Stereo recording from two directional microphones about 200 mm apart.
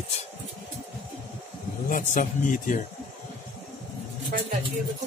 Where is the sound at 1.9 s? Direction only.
40° left (ahead or behind).